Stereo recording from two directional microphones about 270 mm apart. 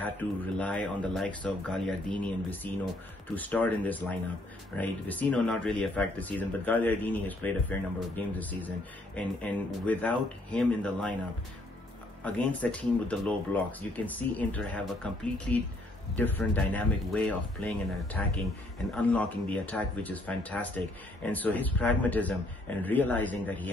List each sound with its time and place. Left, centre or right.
0.0 s speech: centre
12.3 s speech: centre